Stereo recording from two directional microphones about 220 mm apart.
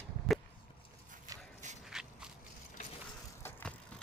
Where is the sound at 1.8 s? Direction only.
5° right (ahead or behind).